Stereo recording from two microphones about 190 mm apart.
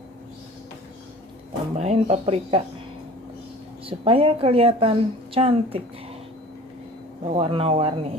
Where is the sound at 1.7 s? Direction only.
35° right (ahead or behind).